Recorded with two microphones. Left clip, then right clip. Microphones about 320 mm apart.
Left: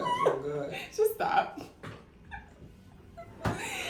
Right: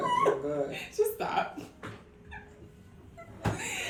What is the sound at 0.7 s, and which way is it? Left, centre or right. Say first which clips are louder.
Speech: left 1 dB; centre.